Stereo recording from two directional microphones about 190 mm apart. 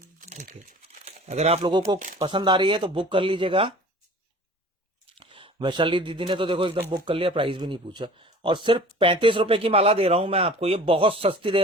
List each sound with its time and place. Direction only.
0.2 s crumpling: 40° right (ahead or behind)
1.0 s speech: 35° right (ahead or behind)
5.1 s speech: 25° right (ahead or behind)